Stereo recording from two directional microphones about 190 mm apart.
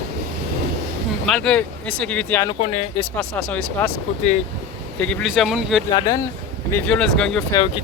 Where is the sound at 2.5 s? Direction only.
35° left (ahead or behind).